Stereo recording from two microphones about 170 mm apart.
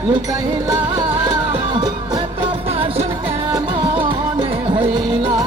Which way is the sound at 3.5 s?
30° right (ahead or behind).